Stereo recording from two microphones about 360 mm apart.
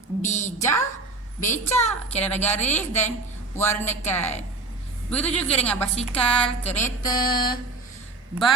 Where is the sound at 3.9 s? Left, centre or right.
Centre.